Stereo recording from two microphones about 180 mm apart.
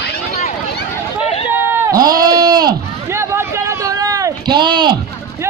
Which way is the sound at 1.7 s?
15° right (ahead or behind).